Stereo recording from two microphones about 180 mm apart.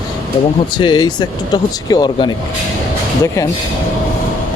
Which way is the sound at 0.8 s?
25° left (ahead or behind).